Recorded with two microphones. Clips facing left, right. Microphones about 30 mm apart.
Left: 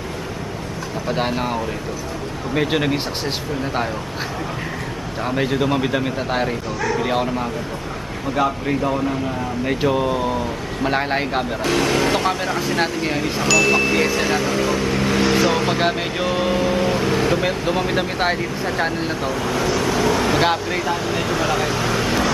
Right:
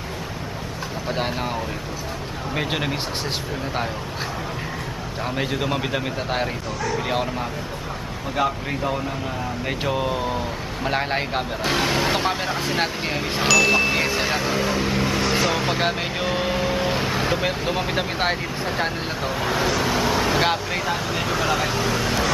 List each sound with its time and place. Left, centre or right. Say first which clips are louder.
1.0 s speech: left 4 dB; centre
5.2 s speech: left 5 dB; centre
11.6 s speech: left 3 dB; centre
15.0 s vehicle: left 6 dB; centre
15.6 s speech: left 3 dB; centre
19.2 s speech: right 1 dB; centre
20.0 s speech: left 4 dB; centre